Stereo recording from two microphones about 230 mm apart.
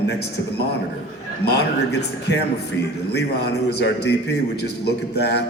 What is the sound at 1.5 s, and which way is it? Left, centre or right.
Speech, left.